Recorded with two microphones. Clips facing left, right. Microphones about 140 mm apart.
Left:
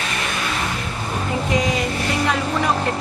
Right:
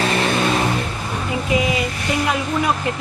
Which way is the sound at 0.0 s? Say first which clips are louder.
Right 7 dB; 35° right (ahead or behind).